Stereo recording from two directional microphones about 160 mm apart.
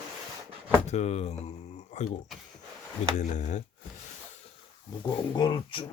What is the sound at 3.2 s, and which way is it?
Speech, 50° left (ahead or behind).